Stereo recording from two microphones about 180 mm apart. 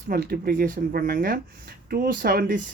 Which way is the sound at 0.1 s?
55° right (ahead or behind).